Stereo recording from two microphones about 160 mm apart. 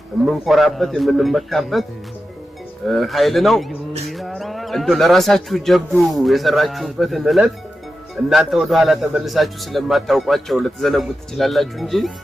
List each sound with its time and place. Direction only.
0.3 s speech: centre (ahead or behind)
2.8 s speech: centre (ahead or behind)